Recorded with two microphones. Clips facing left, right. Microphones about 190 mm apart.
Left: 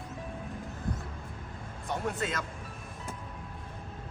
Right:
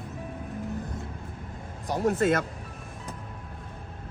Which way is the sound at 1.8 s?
40° right (ahead or behind).